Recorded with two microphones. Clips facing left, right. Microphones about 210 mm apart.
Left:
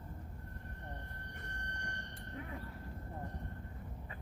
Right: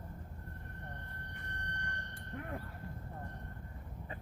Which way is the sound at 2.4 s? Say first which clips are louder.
Right 3 dB; 60° right (ahead or behind).